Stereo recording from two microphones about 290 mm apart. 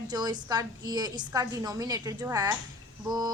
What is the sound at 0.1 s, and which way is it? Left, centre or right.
Speech, centre.